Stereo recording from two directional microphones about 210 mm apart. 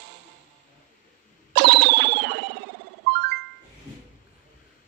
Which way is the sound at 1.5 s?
55° right (ahead or behind).